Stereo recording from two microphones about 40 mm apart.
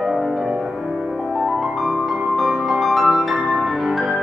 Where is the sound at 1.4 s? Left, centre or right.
Centre.